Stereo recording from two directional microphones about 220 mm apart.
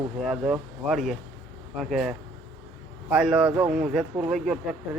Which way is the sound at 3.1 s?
5° right (ahead or behind).